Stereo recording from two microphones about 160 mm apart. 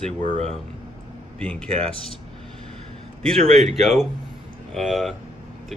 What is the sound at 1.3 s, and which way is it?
Speech, 5° left (ahead or behind).